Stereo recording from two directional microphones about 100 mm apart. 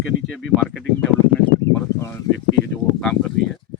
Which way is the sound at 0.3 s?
Centre (ahead or behind).